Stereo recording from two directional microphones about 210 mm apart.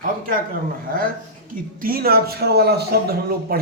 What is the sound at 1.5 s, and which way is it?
A man's voice, 45° right (ahead or behind).